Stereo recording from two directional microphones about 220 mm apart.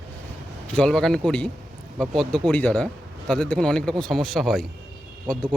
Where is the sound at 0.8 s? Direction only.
Centre (ahead or behind).